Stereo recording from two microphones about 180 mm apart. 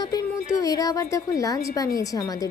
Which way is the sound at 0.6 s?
20° left (ahead or behind).